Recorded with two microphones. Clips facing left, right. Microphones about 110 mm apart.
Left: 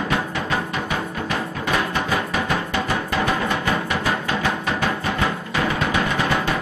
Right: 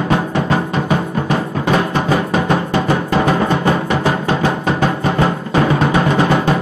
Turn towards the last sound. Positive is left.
turn(degrees=-35)  # may be behind; listen again after turning